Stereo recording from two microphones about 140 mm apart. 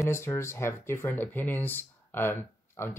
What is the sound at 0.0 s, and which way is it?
Speech, 20° left (ahead or behind).